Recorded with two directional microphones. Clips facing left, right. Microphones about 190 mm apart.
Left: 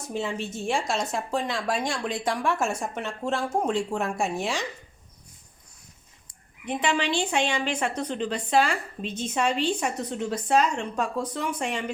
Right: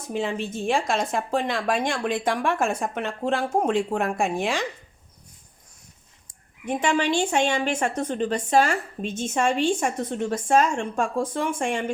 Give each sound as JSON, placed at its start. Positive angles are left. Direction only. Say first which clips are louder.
{"t": 0.1, "sound": "speech", "louder": "right 3 dB", "side_deg": -55}
{"t": 6.2, "sound": "a woman's voice", "louder": "right 3 dB", "side_deg": -45}